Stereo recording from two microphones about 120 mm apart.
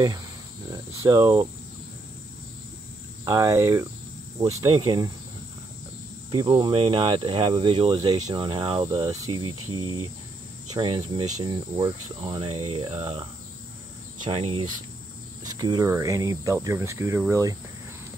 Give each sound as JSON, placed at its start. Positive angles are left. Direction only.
{"t": 0.7, "sound": "speech", "side_deg": -30}
{"t": 3.3, "sound": "cricket", "side_deg": -30}
{"t": 4.4, "sound": "speech", "side_deg": -30}
{"t": 6.3, "sound": "speech", "side_deg": -40}
{"t": 9.0, "sound": "cricket", "side_deg": -30}
{"t": 10.7, "sound": "speech", "side_deg": -35}
{"t": 14.2, "sound": "insect", "side_deg": -50}
{"t": 15.4, "sound": "cricket", "side_deg": -35}